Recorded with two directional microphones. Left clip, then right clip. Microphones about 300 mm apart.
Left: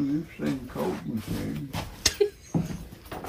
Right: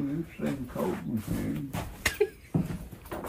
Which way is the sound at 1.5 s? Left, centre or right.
Centre.